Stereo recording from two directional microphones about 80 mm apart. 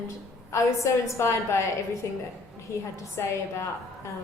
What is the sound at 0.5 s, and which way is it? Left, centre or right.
A woman's voice, left.